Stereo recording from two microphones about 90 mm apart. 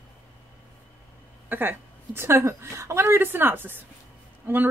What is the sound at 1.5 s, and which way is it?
Speech, 20° right (ahead or behind).